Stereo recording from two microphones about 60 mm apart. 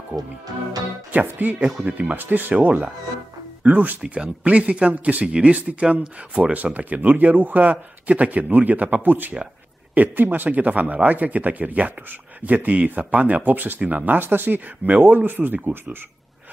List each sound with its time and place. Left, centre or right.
0.1 s speech: centre
1.6 s speech: centre
2.1 s speech: right